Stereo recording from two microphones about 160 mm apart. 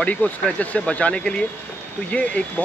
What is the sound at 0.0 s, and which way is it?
Speech, 10° left (ahead or behind).